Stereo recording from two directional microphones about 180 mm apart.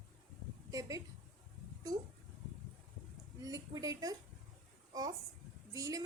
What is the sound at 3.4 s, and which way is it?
Speech, 20° right (ahead or behind).